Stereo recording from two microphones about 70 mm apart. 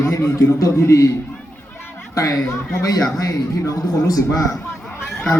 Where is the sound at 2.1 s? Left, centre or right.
Left.